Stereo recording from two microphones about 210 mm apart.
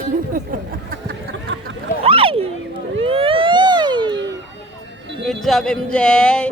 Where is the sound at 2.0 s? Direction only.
25° right (ahead or behind).